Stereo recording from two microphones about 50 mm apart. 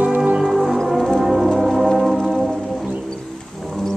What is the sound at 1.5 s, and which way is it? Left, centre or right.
Music, centre.